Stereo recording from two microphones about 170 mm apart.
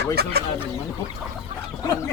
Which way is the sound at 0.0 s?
70° right (ahead or behind).